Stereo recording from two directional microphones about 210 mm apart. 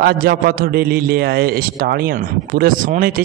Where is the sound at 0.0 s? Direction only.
45° right (ahead or behind).